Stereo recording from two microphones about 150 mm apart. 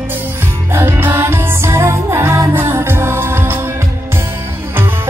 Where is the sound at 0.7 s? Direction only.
15° right (ahead or behind).